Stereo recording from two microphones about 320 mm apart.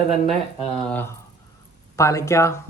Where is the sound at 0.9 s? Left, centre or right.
Centre.